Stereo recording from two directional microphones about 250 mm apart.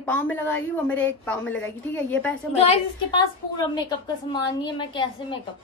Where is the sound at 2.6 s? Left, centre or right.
Left.